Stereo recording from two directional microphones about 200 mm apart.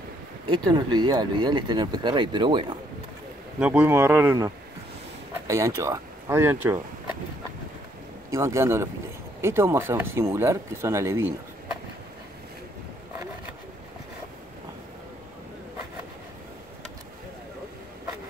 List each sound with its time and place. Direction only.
0.5 s speech: 20° right (ahead or behind)
3.5 s speech: 5° right (ahead or behind)
5.5 s speech: 15° right (ahead or behind)
8.3 s speech: 15° right (ahead or behind)